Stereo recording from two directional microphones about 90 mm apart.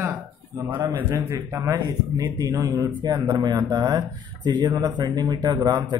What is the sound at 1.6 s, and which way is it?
Speech, 45° right (ahead or behind).